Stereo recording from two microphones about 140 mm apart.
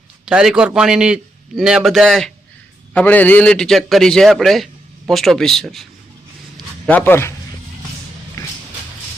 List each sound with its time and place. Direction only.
0.3 s a man's voice: 5° right (ahead or behind)
6.8 s a man's voice: 15° left (ahead or behind)